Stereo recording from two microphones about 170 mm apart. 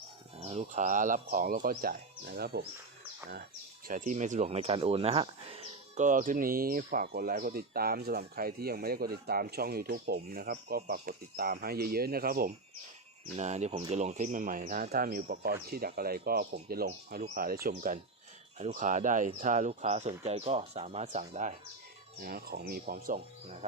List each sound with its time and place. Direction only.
0.4 s speech: 45° right (ahead or behind); by 2.6 s 65° right (ahead or behind)
3.8 s speech: 50° right (ahead or behind); by 6.1 s 35° right (ahead or behind)
6.1 s speech: 50° right (ahead or behind)
13.3 s speech: 40° right (ahead or behind)
22.2 s speech: 60° right (ahead or behind)